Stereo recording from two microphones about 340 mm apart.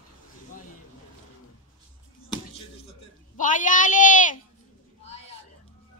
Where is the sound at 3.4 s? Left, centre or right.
Left.